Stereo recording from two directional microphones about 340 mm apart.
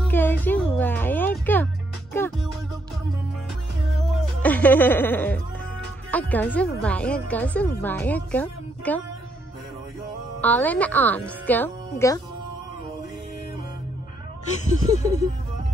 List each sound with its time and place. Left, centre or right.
0.1 s music: centre
3.9 s music: centre
6.1 s speech: centre
10.4 s speech: centre
14.6 s a sound: centre